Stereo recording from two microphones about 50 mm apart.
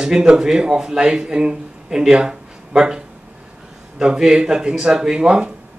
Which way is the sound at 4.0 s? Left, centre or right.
Centre.